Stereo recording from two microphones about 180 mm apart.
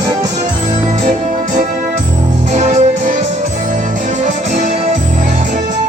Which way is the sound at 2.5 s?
40° right (ahead or behind).